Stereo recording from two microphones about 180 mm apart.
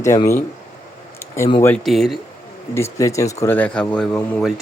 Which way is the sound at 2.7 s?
15° left (ahead or behind).